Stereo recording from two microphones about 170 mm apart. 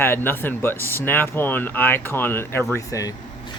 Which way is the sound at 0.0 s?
10° left (ahead or behind).